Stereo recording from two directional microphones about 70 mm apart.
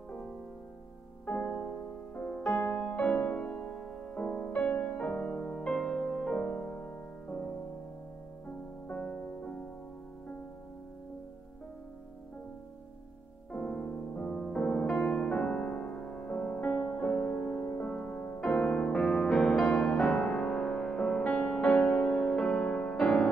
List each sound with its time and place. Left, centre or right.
1.2 s music: left
2.1 s music: centre
2.5 s music: left
2.8 s music: centre
8.8 s music: left
13.5 s music: centre
18.4 s music: centre